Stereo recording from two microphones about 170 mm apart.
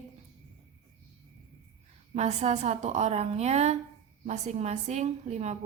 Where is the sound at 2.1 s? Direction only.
40° right (ahead or behind).